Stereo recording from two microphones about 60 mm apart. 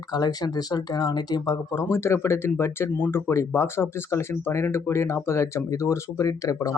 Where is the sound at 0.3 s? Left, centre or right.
Left.